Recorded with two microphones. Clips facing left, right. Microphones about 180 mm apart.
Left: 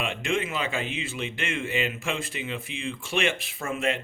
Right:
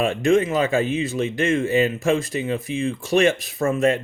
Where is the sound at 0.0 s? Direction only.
40° right (ahead or behind).